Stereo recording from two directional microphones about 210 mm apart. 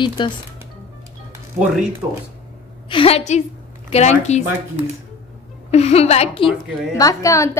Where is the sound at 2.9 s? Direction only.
25° left (ahead or behind).